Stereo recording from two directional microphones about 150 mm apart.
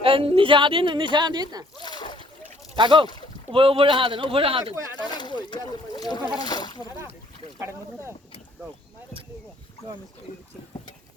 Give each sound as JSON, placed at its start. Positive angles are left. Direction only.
{"t": 0.0, "sound": "speech", "side_deg": -35}
{"t": 1.8, "sound": "splash", "side_deg": 30}
{"t": 2.7, "sound": "speech", "side_deg": -30}
{"t": 4.9, "sound": "a sound", "side_deg": 30}
{"t": 5.4, "sound": "speech", "side_deg": 30}
{"t": 7.6, "sound": "speech", "side_deg": -15}